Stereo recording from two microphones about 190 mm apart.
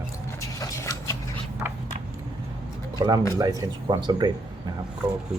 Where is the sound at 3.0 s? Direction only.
25° right (ahead or behind).